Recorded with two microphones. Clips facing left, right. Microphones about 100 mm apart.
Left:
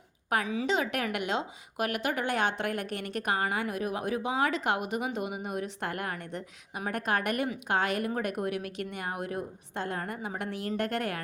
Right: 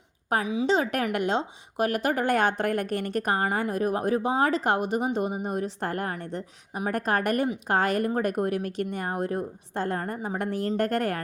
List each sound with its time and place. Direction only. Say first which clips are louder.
0.4 s a woman's voice: right 5 dB; 20° right (ahead or behind)
0.7 s a woman's voice: right 6 dB; 35° right (ahead or behind)